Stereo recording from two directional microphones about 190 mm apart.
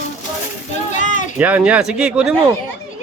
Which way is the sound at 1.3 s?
5° right (ahead or behind).